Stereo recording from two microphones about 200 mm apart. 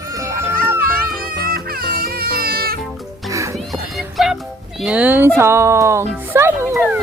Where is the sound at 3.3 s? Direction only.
15° right (ahead or behind).